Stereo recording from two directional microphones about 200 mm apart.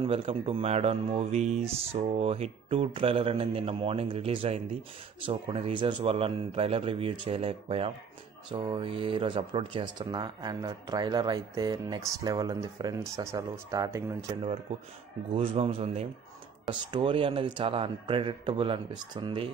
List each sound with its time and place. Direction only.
0.0 s speech: 25° right (ahead or behind)
15.3 s speech: 30° right (ahead or behind)